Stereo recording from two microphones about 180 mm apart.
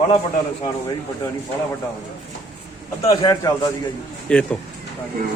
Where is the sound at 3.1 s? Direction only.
20° left (ahead or behind).